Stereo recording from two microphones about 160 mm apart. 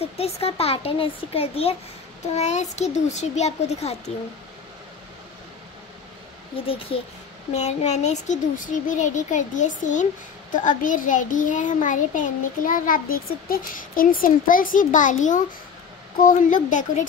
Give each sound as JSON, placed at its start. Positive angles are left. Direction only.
{"t": 0.0, "sound": "a child's voice", "side_deg": 40}
{"t": 6.5, "sound": "a child's voice", "side_deg": 35}